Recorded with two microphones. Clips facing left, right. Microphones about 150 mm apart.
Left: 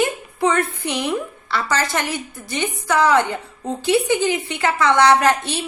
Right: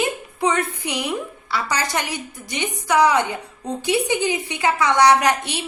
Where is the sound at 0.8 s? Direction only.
15° right (ahead or behind).